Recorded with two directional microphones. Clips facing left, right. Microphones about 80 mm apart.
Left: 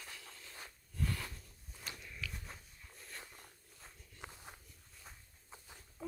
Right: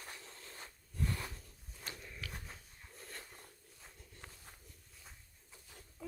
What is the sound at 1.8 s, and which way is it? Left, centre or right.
Walk, right.